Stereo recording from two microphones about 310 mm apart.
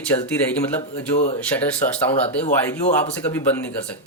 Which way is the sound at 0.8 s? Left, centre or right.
Left.